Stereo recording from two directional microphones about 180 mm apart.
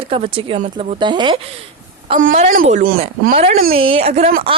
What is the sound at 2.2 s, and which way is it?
A woman's voice, 45° right (ahead or behind).